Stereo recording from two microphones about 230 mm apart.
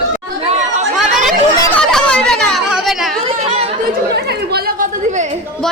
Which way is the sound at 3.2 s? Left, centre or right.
Right.